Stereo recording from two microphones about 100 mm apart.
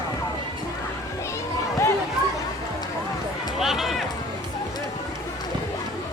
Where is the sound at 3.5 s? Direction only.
5° right (ahead or behind).